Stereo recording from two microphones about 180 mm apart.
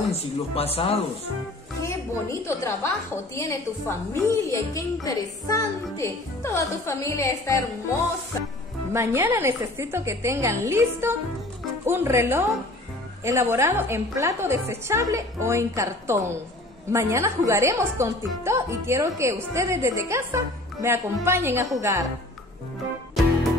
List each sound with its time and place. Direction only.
0.1 s speech: 35° left (ahead or behind)
2.4 s a woman's voice: 15° left (ahead or behind)
8.9 s a woman's voice: 15° right (ahead or behind)